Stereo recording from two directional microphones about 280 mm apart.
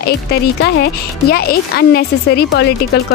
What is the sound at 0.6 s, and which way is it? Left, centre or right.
Speech, left.